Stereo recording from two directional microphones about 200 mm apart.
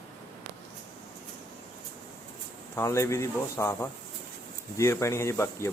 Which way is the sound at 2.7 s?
15° left (ahead or behind).